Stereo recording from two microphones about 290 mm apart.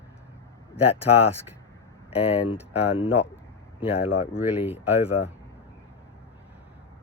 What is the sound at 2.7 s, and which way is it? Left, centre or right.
Speech, centre.